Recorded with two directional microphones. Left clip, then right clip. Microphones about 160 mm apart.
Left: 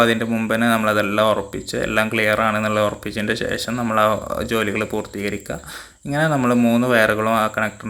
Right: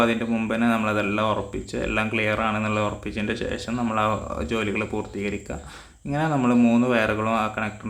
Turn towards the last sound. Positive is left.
turn(degrees=20)  # may be behind; listen again after turning